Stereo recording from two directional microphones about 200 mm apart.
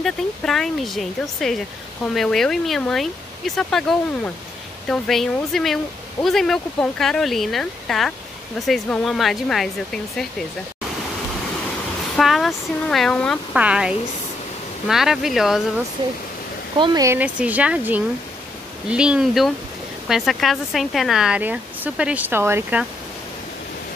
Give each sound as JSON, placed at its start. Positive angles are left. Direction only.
{"t": 0.0, "sound": "speech", "side_deg": 0}
{"t": 12.2, "sound": "speech", "side_deg": 0}
{"t": 16.7, "sound": "speech", "side_deg": -20}